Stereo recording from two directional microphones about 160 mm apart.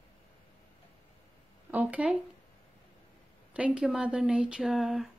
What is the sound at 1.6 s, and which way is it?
Speech, 10° right (ahead or behind).